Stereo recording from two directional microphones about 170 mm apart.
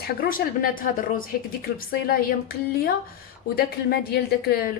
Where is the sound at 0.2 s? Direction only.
55° left (ahead or behind).